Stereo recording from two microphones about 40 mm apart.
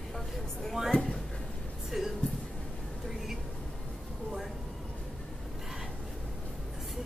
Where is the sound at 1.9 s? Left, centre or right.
Centre.